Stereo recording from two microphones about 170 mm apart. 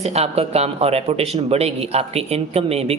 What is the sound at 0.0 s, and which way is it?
A man's voice, 40° right (ahead or behind).